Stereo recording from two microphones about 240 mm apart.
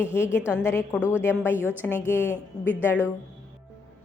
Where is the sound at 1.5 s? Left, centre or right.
Centre.